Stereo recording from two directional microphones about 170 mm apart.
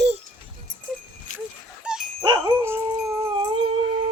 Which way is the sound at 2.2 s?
25° right (ahead or behind).